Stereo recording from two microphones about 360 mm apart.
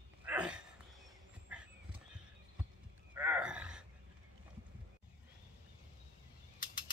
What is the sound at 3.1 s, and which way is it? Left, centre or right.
Gasp, centre.